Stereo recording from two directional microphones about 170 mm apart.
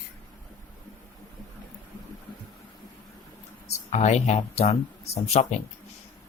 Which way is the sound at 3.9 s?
40° left (ahead or behind).